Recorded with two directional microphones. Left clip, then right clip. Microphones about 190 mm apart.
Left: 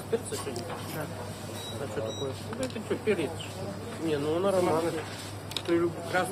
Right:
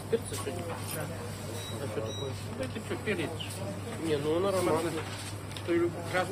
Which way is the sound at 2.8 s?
20° left (ahead or behind).